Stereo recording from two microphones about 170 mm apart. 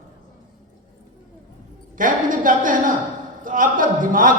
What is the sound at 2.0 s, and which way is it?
A woman's voice, 50° right (ahead or behind).